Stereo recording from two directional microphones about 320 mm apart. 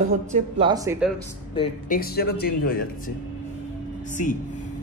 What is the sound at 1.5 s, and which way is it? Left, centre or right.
Speech, left.